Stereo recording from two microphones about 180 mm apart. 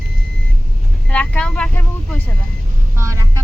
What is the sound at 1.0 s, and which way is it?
Speech, 5° left (ahead or behind).